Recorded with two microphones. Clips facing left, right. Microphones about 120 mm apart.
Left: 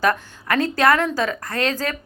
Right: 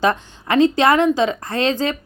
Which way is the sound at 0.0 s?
25° right (ahead or behind).